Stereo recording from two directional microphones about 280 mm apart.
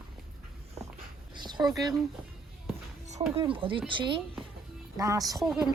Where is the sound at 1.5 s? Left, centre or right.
Centre.